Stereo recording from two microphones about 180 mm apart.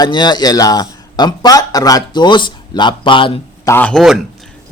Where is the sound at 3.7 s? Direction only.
10° left (ahead or behind).